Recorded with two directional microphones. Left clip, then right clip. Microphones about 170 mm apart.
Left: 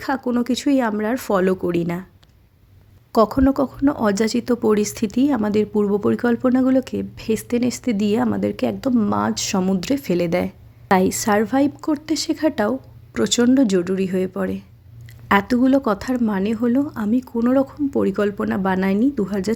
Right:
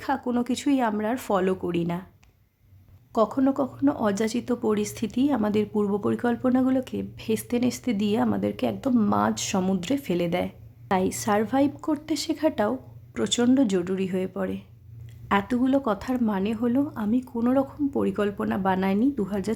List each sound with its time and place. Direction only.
0.0 s speech: 25° left (ahead or behind)
3.1 s speech: 30° left (ahead or behind)